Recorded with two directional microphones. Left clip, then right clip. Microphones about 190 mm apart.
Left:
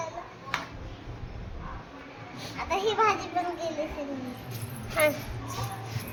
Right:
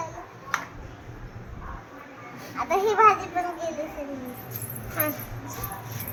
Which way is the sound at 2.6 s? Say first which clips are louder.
Right 6 dB; 35° right (ahead or behind).